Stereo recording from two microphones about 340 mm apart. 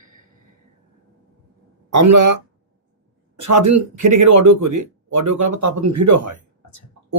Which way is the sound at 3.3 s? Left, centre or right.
Right.